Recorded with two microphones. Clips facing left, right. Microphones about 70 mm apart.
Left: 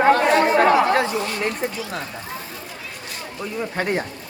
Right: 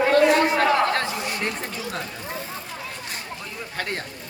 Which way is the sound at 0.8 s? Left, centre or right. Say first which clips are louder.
Left 4 dB; centre.